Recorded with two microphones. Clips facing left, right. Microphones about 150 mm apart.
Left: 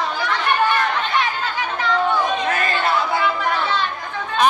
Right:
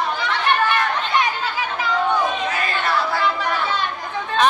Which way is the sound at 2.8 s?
20° left (ahead or behind).